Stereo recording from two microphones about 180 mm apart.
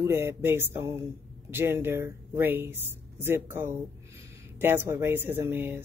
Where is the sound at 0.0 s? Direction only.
15° right (ahead or behind).